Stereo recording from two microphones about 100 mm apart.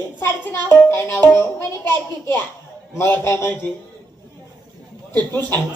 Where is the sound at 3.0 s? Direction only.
25° left (ahead or behind).